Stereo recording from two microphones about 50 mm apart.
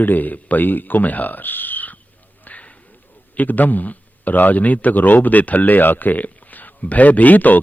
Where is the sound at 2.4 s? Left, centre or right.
Left.